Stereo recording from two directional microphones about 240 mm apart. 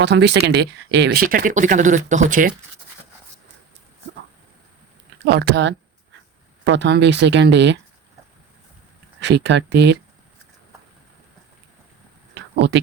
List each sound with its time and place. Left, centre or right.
0.0 s speech: right
5.2 s speech: right
9.3 s speech: right
12.3 s a sound: right